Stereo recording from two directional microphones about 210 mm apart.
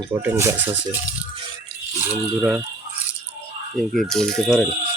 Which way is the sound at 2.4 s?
5° right (ahead or behind).